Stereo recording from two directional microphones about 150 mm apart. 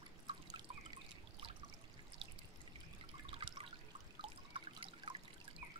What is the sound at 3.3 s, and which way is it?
Drip, 40° right (ahead or behind).